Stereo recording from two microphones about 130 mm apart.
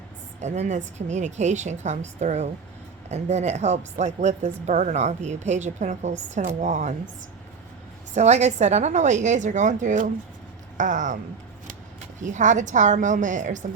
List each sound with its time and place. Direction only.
0.4 s a woman's voice: 60° right (ahead or behind)
8.1 s a woman's voice: 60° right (ahead or behind); by 11.2 s 75° right (ahead or behind)
12.2 s a woman's voice: 70° right (ahead or behind)